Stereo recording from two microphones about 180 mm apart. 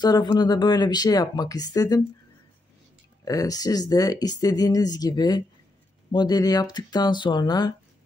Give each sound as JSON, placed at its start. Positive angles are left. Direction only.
{"t": 0.0, "sound": "speech", "side_deg": 20}
{"t": 3.3, "sound": "speech", "side_deg": 20}